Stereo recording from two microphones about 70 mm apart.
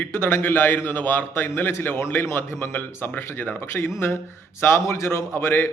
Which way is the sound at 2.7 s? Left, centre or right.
Left.